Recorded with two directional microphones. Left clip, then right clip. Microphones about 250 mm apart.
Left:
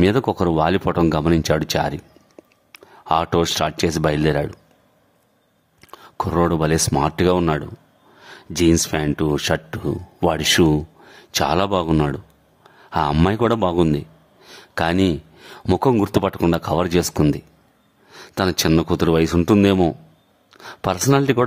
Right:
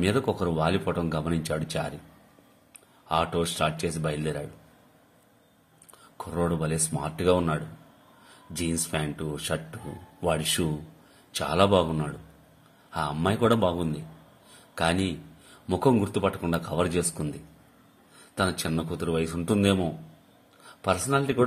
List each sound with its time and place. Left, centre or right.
0.0 s speech: left
5.9 s speech: left
18.3 s speech: left